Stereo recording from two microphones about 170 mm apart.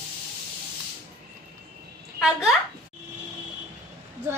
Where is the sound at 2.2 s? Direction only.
Centre (ahead or behind).